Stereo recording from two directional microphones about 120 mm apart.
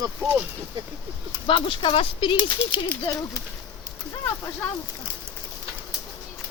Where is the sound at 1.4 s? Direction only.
45° left (ahead or behind).